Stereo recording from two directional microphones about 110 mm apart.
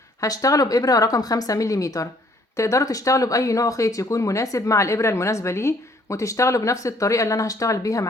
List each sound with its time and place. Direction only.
0.2 s speech: 30° left (ahead or behind)